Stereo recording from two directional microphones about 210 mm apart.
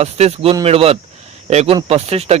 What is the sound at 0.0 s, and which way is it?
A man's voice, 30° right (ahead or behind).